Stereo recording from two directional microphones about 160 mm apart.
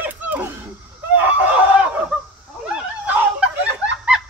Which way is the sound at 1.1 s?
10° right (ahead or behind).